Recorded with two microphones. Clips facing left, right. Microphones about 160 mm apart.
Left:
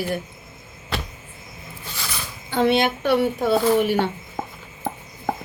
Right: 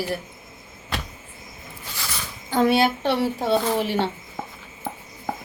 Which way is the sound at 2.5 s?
40° right (ahead or behind).